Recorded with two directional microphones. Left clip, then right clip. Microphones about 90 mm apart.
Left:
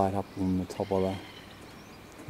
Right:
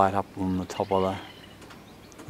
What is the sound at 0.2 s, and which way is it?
Speech, 20° left (ahead or behind).